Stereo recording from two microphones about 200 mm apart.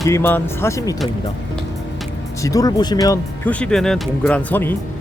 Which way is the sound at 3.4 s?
5° left (ahead or behind).